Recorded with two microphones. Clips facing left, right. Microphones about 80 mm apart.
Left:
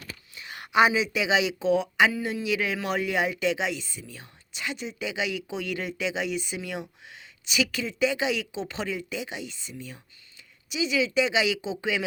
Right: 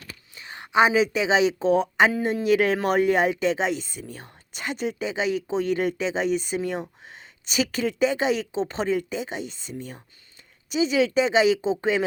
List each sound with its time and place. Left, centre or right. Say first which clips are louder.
0.3 s a sound: right 1 dB; right
0.9 s speech: right 4 dB; right
5.0 s speech: right 3 dB; right